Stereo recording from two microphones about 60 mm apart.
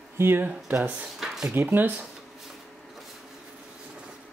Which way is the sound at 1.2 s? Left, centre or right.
Centre.